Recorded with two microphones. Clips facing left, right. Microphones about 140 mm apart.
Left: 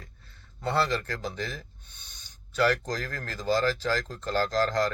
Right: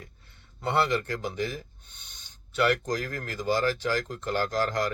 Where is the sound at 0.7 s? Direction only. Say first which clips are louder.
Right 1 dB; 20° right (ahead or behind).